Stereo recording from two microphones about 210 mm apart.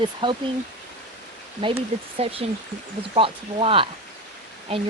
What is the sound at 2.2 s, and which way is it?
Speech, 30° right (ahead or behind).